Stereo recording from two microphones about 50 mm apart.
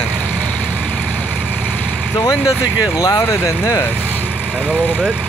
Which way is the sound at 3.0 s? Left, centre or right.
Left.